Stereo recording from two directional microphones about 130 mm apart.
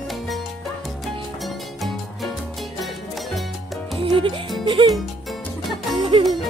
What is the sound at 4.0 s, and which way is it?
Speech, 40° right (ahead or behind).